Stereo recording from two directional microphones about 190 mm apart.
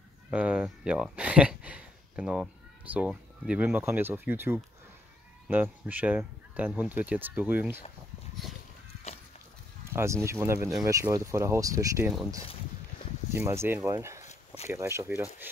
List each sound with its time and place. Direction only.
0.3 s speech: 5° right (ahead or behind)
9.8 s speech: 15° right (ahead or behind)
13.3 s speech: 10° right (ahead or behind)
14.2 s a sound: 35° left (ahead or behind)
14.7 s speech: 15° right (ahead or behind)